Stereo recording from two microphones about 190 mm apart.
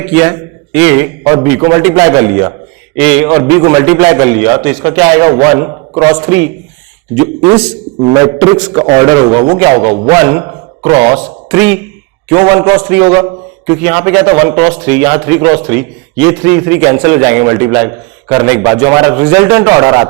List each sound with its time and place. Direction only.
0.1 s a man's voice: 10° right (ahead or behind)
3.2 s a man's voice: 20° right (ahead or behind)
8.1 s a man's voice: 20° right (ahead or behind)
11.5 s a man's voice: 10° right (ahead or behind)
12.3 s a man's voice: 20° right (ahead or behind)